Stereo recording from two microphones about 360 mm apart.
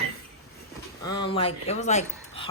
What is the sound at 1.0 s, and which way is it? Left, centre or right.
Speech, centre.